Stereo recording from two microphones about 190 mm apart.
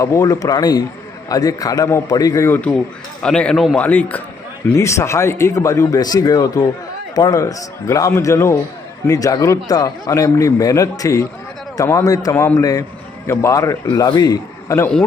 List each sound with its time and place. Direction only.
0.0 s a man's voice: 15° left (ahead or behind)